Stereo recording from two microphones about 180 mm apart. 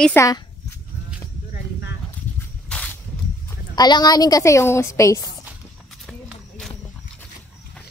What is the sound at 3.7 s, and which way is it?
A woman's voice, 20° left (ahead or behind).